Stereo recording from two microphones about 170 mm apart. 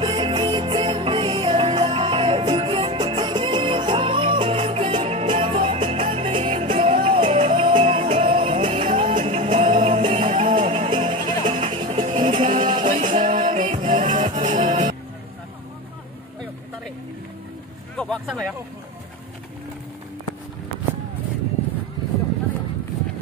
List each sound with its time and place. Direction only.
0.0 s music: 30° right (ahead or behind)
12.8 s music: 45° right (ahead or behind)
17.9 s vehicle: 5° left (ahead or behind)